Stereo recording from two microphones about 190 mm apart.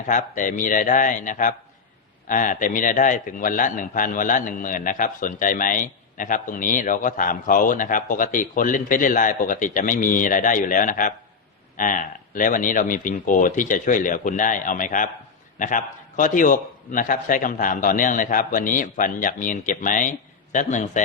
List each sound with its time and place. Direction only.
0.1 s a man's voice: 40° left (ahead or behind)